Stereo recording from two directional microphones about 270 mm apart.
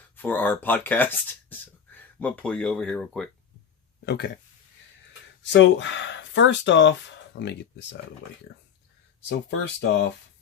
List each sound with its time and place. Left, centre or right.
0.2 s speech: centre
4.0 s speech: left
5.4 s speech: left
9.5 s speech: left